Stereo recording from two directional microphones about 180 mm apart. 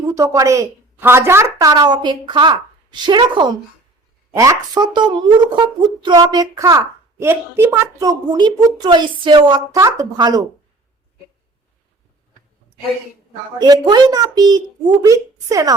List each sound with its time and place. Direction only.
0.0 s a woman's voice: 20° right (ahead or behind)
13.6 s a woman's voice: 25° right (ahead or behind)